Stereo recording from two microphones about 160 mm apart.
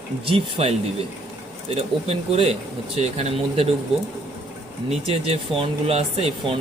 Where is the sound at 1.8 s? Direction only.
40° right (ahead or behind).